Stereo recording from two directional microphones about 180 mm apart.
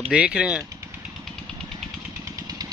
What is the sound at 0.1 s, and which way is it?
Speech, 5° right (ahead or behind).